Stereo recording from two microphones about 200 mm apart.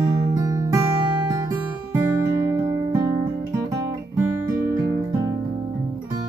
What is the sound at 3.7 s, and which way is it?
Guitar, 15° right (ahead or behind).